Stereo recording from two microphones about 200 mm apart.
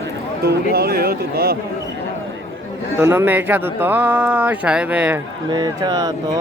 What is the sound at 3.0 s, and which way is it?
Speech, 10° right (ahead or behind).